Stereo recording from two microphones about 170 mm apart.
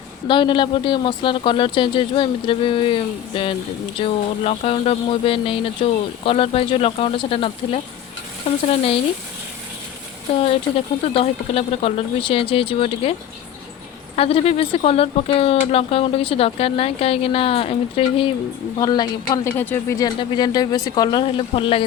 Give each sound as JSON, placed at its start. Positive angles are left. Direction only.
{"t": 0.3, "sound": "speech", "side_deg": 30}
{"t": 10.4, "sound": "speech", "side_deg": 35}
{"t": 14.2, "sound": "speech", "side_deg": 35}
{"t": 18.8, "sound": "speech", "side_deg": 25}